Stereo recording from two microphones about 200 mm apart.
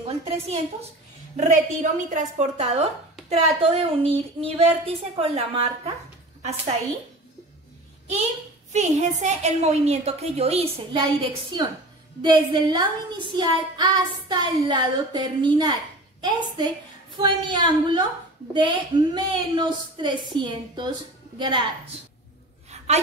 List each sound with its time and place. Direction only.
0.0 s a woman's voice: 30° right (ahead or behind)
8.7 s a woman's voice: 35° right (ahead or behind)